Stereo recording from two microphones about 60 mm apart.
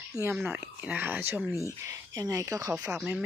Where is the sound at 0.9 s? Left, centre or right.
Right.